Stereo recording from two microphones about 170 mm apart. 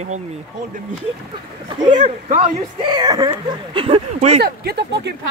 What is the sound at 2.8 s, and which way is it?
Speech, 25° right (ahead or behind).